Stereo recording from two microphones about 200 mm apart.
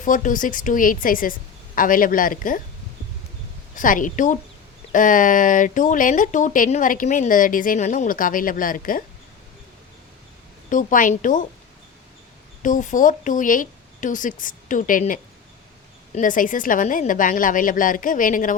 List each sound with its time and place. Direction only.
0.0 s a woman's voice: 40° left (ahead or behind)
3.8 s speech: 40° left (ahead or behind)
10.7 s speech: 40° left (ahead or behind)
12.6 s speech: 40° left (ahead or behind)